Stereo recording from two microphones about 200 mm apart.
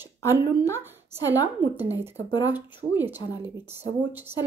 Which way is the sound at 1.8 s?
10° right (ahead or behind).